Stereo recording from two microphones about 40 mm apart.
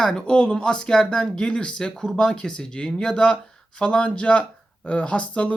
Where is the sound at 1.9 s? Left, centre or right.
Centre.